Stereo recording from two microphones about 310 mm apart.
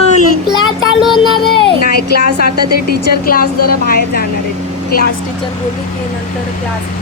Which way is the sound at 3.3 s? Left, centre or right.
Left.